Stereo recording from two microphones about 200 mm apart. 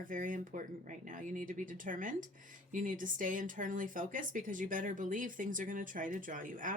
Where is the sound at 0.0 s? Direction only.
40° right (ahead or behind).